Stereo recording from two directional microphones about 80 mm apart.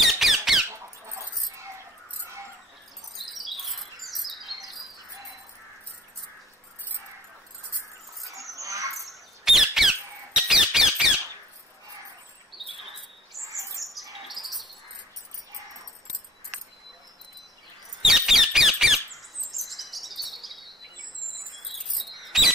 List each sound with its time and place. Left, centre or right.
0.0 s squeak: centre
0.7 s dog: right
3.3 s bird: centre
8.5 s squawk: right
9.4 s squawk: centre
12.5 s a sound: centre
13.4 s bird: right
14.2 s bird: centre
18.0 s squeak: centre
19.5 s chirp: centre